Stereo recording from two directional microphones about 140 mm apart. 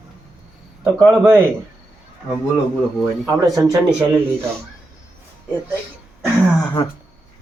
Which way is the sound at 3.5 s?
25° right (ahead or behind).